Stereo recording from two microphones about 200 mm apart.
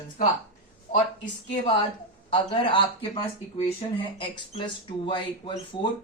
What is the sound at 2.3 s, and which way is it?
Speech, 25° left (ahead or behind).